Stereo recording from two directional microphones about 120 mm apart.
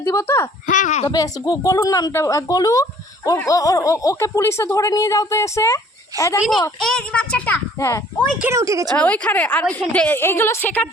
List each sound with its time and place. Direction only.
0.0 s speech: 20° left (ahead or behind)
0.7 s speech: 90° left
1.0 s speech: 35° left (ahead or behind)
6.7 s a woman's voice: 5° left (ahead or behind)
7.8 s speech: 25° left (ahead or behind)
8.5 s speech: 25° right (ahead or behind)
9.0 s a woman's voice: 10° left (ahead or behind)